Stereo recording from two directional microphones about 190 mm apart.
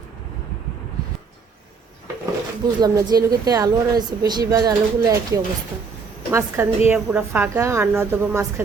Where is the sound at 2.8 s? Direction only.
20° right (ahead or behind).